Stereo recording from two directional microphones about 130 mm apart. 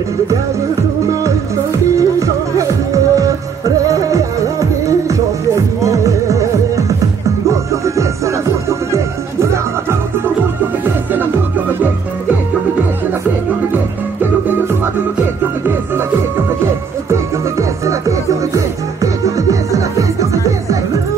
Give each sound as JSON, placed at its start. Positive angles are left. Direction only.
{"t": 2.0, "sound": "music", "side_deg": -25}
{"t": 17.1, "sound": "music", "side_deg": -25}